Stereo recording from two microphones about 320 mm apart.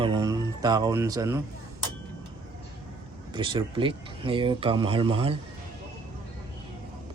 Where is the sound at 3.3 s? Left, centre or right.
Centre.